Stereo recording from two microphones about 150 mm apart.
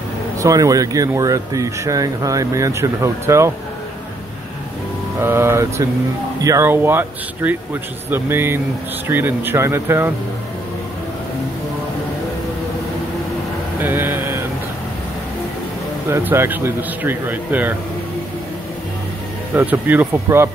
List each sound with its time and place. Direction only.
0.4 s speech: 25° right (ahead or behind)
5.2 s speech: 15° right (ahead or behind)
13.7 s a sound: 15° right (ahead or behind)
16.1 s speech: 15° right (ahead or behind)
19.5 s speech: 10° right (ahead or behind)